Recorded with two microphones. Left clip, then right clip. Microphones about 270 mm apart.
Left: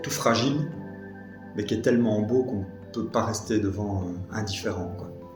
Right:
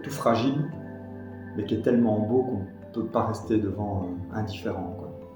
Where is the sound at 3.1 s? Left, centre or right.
Left.